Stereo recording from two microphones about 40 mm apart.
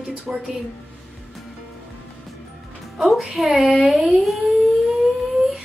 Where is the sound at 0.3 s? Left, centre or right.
Centre.